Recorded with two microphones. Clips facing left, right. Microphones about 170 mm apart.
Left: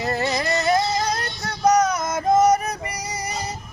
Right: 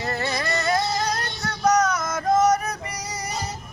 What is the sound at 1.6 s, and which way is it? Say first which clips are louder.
Music: left 2 dB; 20° left (ahead or behind).